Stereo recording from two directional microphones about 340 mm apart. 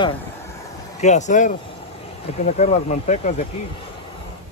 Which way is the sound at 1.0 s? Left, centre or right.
Left.